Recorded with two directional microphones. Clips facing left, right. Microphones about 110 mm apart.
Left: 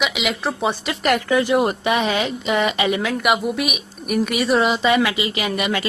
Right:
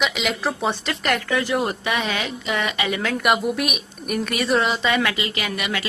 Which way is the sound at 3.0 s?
5° left (ahead or behind).